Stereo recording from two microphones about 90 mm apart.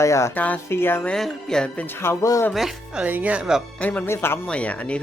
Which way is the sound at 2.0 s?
30° left (ahead or behind).